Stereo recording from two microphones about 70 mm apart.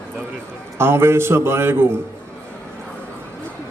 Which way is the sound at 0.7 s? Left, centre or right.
Right.